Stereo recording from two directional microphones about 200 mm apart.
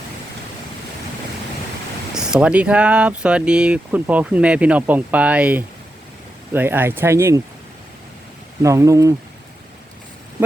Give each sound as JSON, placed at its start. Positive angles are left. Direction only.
{"t": 2.1, "sound": "speech", "side_deg": -5}
{"t": 8.6, "sound": "speech", "side_deg": -15}